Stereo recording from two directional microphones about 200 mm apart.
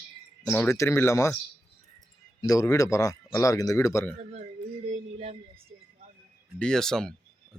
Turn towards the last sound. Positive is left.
turn(degrees=5)  # may be behind; listen again after turning